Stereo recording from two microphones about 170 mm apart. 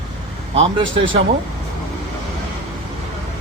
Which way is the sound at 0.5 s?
35° right (ahead or behind).